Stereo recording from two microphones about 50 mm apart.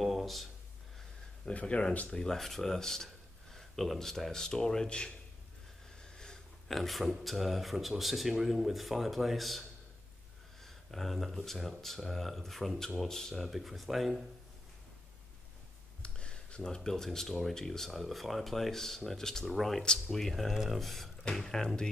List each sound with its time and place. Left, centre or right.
0.0 s a sound: centre
1.4 s speech: left
6.1 s a sound: centre
6.7 s speech: centre
16.0 s speech: left; by 19.8 s centre
19.8 s speech: centre
20.2 s speech: centre